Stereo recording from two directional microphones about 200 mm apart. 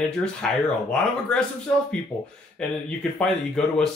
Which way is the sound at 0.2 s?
5° left (ahead or behind).